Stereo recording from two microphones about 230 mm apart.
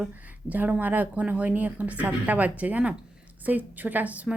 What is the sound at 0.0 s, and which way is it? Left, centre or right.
A woman's voice, centre.